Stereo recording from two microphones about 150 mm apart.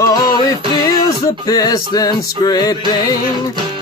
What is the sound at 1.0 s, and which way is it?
Music, 25° left (ahead or behind).